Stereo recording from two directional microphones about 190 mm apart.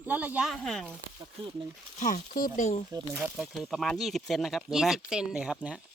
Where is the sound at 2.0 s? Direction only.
45° left (ahead or behind).